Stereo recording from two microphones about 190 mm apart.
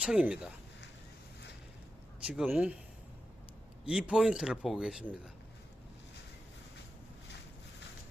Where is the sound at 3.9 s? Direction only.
5° right (ahead or behind).